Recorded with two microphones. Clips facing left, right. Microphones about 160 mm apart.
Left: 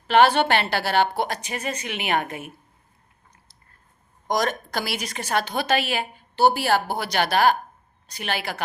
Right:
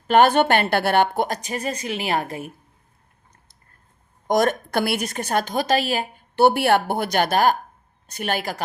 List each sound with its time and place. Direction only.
0.1 s a woman's voice: 45° right (ahead or behind)
4.3 s a woman's voice: 50° right (ahead or behind)
6.3 s a woman's voice: 60° right (ahead or behind)